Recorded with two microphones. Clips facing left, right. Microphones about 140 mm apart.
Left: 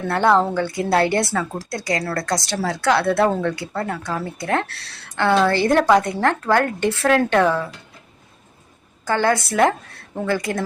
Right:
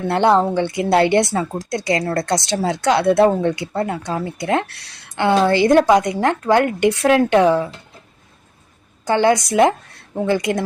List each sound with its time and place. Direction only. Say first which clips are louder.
0.1 s speech: right 2 dB; 20° right (ahead or behind)
9.0 s speech: right 4 dB; 20° right (ahead or behind)